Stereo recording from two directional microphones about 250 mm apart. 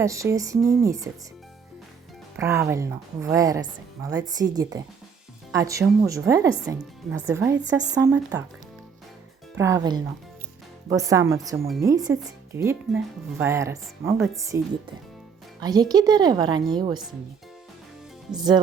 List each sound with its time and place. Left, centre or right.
0.0 s speech: centre
2.3 s speech: centre
9.6 s speech: centre
15.6 s speech: centre
18.3 s speech: centre